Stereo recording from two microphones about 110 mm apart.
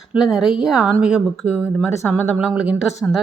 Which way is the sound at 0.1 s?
5° right (ahead or behind).